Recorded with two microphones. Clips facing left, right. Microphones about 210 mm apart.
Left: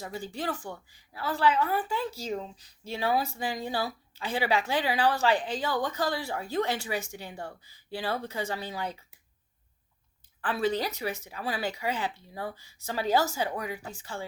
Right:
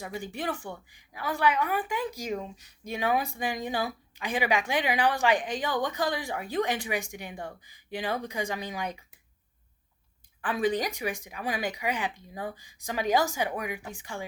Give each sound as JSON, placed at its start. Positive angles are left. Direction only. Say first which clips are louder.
{"t": 0.0, "sound": "speech", "louder": "even", "side_deg": -15}
{"t": 10.4, "sound": "speech", "louder": "right 1 dB", "side_deg": -15}